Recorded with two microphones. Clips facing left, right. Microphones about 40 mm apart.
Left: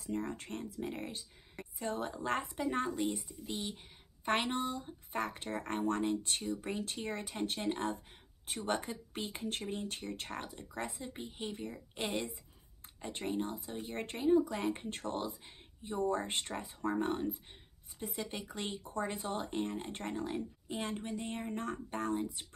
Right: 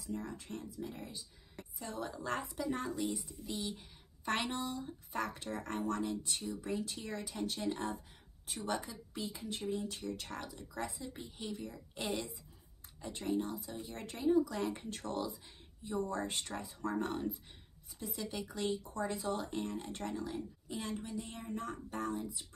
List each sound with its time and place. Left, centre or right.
0.0 s speech: left
1.6 s a woman's voice: left